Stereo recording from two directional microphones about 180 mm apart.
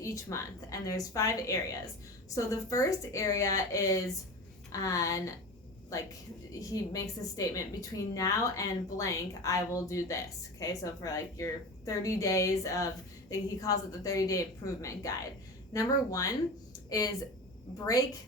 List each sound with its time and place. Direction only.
0.0 s a woman's voice: 15° left (ahead or behind)